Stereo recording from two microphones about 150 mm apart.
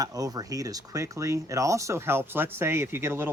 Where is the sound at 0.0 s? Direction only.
25° right (ahead or behind).